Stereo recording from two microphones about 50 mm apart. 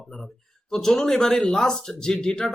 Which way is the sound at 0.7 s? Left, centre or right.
Centre.